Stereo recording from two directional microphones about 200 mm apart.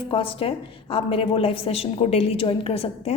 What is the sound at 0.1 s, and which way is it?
A woman's voice, 25° left (ahead or behind).